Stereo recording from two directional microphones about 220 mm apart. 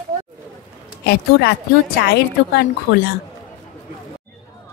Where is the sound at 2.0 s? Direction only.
45° left (ahead or behind).